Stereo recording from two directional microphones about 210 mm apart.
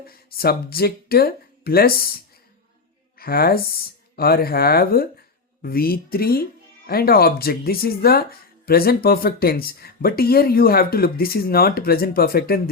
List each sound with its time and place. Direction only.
0.1 s speech: 45° left (ahead or behind)